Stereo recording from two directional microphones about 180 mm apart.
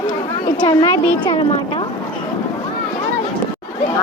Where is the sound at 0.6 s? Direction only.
25° left (ahead or behind).